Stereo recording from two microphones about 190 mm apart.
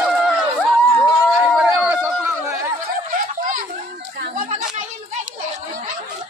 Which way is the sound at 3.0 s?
45° right (ahead or behind).